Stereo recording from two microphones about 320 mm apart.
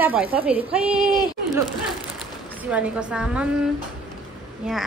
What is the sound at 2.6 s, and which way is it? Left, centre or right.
Speech, centre.